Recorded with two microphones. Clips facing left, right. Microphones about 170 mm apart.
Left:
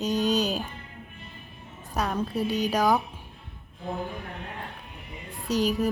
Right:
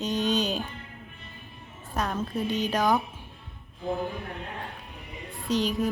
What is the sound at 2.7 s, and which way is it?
Music, 10° left (ahead or behind).